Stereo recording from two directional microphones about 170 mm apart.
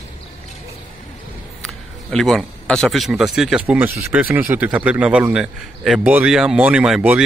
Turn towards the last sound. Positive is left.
turn(degrees=-5)  # may be behind; listen again after turning